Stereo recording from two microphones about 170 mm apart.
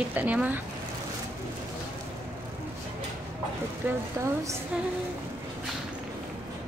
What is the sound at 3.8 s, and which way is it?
Speech, 15° right (ahead or behind).